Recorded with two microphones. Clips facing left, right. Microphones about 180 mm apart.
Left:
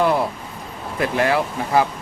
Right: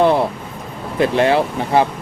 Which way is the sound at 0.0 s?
25° right (ahead or behind).